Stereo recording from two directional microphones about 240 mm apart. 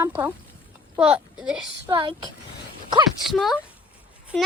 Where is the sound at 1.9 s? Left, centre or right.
Centre.